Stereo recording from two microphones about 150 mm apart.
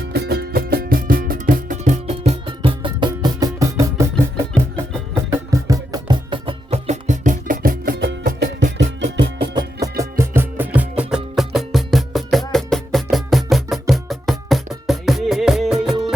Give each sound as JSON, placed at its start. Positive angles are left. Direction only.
{"t": 0.1, "sound": "music", "side_deg": -90}
{"t": 9.1, "sound": "music", "side_deg": -30}
{"t": 10.0, "sound": "music", "side_deg": -15}